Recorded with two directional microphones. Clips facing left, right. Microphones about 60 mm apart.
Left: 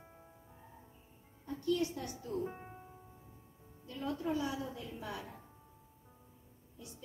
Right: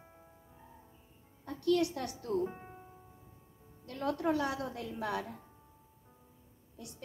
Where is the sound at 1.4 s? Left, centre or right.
Right.